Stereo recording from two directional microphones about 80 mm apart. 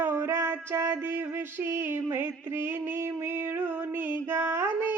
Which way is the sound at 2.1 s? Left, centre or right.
Right.